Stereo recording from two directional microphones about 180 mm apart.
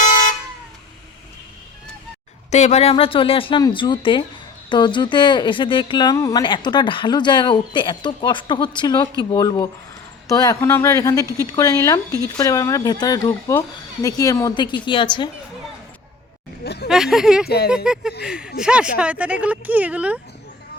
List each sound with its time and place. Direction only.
0.0 s vehicle horn: 45° left (ahead or behind)
2.5 s speech: 40° left (ahead or behind)
16.6 s a sound: 65° left (ahead or behind)
16.9 s speech: 5° right (ahead or behind)